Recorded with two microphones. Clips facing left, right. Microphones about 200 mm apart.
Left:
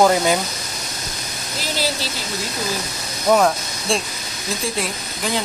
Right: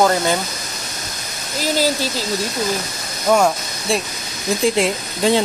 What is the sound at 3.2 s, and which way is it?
Speech, centre (ahead or behind).